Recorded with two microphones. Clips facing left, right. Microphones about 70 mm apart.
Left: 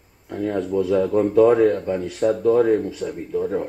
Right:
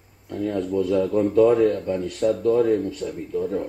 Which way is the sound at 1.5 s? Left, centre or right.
Left.